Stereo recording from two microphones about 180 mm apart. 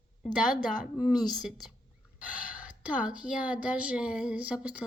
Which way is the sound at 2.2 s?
45° left (ahead or behind).